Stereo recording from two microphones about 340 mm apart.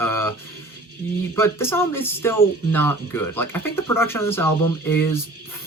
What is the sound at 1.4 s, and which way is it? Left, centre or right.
Speech, centre.